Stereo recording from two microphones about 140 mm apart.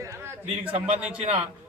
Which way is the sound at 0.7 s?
45° right (ahead or behind).